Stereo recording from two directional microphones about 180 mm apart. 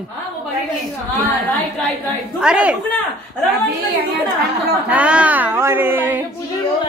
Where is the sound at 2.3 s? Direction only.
5° right (ahead or behind).